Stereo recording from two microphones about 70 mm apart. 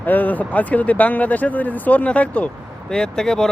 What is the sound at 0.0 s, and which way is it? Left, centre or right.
Speech, left.